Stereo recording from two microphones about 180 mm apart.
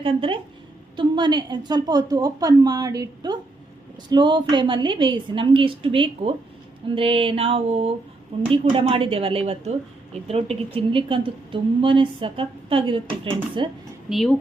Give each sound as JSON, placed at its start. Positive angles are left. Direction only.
{"t": 0.0, "sound": "a woman's voice", "side_deg": -30}
{"t": 14.1, "sound": "a woman's voice", "side_deg": 0}